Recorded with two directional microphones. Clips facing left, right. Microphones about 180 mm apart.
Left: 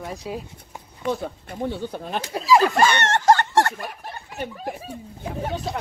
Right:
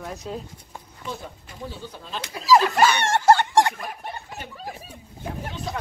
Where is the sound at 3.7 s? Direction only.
Centre (ahead or behind).